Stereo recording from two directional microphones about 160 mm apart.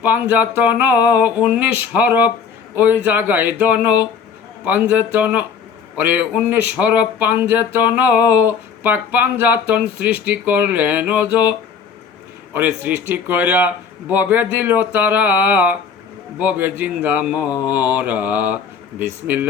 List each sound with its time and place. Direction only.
0.0 s speech: 10° right (ahead or behind)
12.5 s speech: 10° right (ahead or behind)